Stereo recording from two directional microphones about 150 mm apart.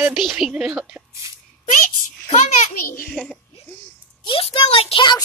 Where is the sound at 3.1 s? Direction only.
5° left (ahead or behind).